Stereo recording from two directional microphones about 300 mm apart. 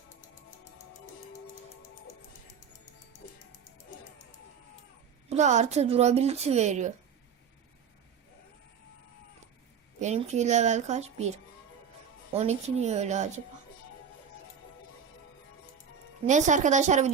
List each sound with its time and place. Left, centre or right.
5.3 s speech: right
10.0 s speech: right
12.3 s speech: right
16.2 s speech: right